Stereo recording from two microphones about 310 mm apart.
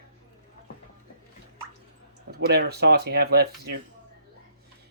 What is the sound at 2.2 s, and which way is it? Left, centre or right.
Speech, right.